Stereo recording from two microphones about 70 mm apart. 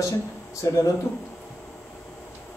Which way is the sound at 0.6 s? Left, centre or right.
Left.